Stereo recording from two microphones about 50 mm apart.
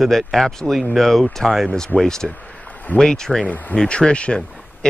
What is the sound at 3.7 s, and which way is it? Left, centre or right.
Speech, centre.